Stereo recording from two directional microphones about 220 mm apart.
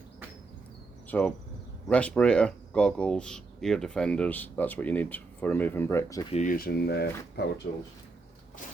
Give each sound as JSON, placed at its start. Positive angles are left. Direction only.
{"t": 1.0, "sound": "speech", "side_deg": 5}
{"t": 6.3, "sound": "speech", "side_deg": 35}